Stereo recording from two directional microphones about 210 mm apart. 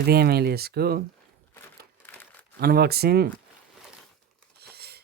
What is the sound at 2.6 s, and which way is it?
Speech, 50° right (ahead or behind).